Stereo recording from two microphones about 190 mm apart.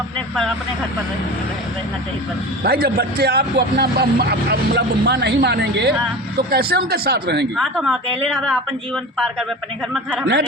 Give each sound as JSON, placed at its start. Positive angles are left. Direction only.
{"t": 2.6, "sound": "speech", "side_deg": -55}
{"t": 7.5, "sound": "speech", "side_deg": 0}
{"t": 9.9, "sound": "speech", "side_deg": 0}